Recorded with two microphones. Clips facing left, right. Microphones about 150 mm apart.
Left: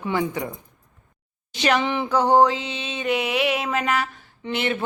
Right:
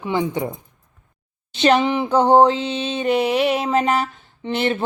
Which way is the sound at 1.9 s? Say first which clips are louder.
Right 4 dB; 25° right (ahead or behind).